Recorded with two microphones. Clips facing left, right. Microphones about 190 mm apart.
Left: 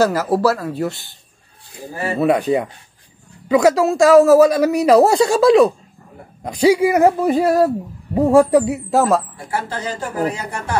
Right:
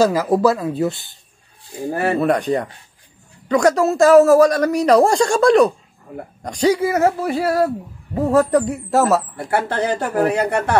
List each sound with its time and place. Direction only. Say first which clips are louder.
0.0 s speech: right 1 dB; 15° right (ahead or behind)
1.9 s speech: right 4 dB; 60° right (ahead or behind)
2.1 s a man's voice: left 5 dB; 5° left (ahead or behind)
9.5 s speech: right 5 dB; 60° right (ahead or behind)